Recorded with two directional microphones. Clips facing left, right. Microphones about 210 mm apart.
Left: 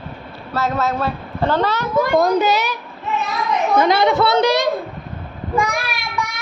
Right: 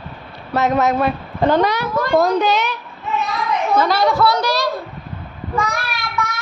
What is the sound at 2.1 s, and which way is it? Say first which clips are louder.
Speech: right 2 dB; 5° left (ahead or behind).